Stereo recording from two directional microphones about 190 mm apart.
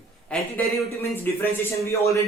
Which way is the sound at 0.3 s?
5° left (ahead or behind).